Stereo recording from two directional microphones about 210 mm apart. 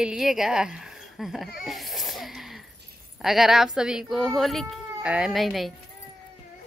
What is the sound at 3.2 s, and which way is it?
A child's voice, centre (ahead or behind).